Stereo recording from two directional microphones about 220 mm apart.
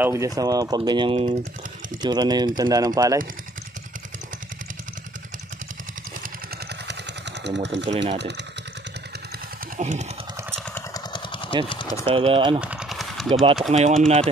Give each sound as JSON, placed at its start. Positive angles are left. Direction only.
{"t": 0.0, "sound": "speech", "side_deg": -15}
{"t": 7.4, "sound": "speech", "side_deg": -50}
{"t": 9.8, "sound": "speech", "side_deg": -30}
{"t": 10.9, "sound": "vehicle", "side_deg": 20}
{"t": 11.7, "sound": "speech", "side_deg": 20}
{"t": 12.1, "sound": "speech", "side_deg": -25}
{"t": 12.5, "sound": "vehicle", "side_deg": -5}
{"t": 13.3, "sound": "speech", "side_deg": -25}